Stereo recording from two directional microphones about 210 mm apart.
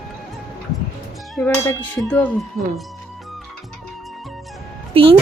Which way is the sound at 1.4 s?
10° left (ahead or behind).